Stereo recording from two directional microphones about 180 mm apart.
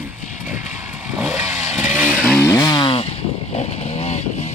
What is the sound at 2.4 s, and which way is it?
Chainsaw, 15° left (ahead or behind).